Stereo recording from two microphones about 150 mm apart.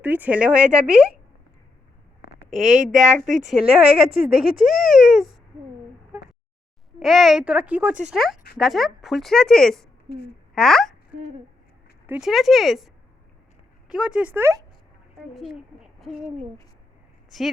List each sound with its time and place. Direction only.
0.0 s speech: 10° right (ahead or behind)
2.5 s a woman's voice: 50° right (ahead or behind)
3.4 s speech: 5° right (ahead or behind)
7.0 s speech: centre (ahead or behind)
10.1 s a woman's voice: 90° left
10.5 s speech: centre (ahead or behind)
12.0 s speech: 10° right (ahead or behind)
15.4 s speech: centre (ahead or behind)